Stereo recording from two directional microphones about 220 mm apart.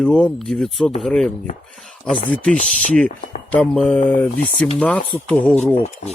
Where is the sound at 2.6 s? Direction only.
35° left (ahead or behind).